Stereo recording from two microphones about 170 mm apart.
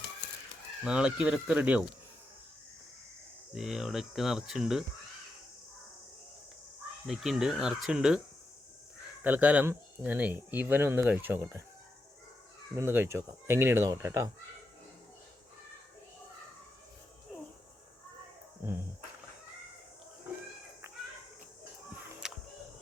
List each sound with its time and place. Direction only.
0.9 s speech: 5° right (ahead or behind)
3.5 s speech: centre (ahead or behind)
7.1 s speech: centre (ahead or behind)
9.2 s speech: 10° right (ahead or behind)
12.7 s speech: 15° right (ahead or behind)
22.2 s music: 5° right (ahead or behind)